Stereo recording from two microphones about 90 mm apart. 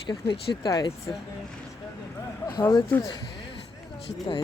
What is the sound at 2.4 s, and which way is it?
Speech, 45° left (ahead or behind).